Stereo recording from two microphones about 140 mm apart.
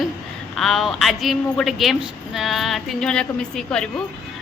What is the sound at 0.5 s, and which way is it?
A woman's voice, centre (ahead or behind).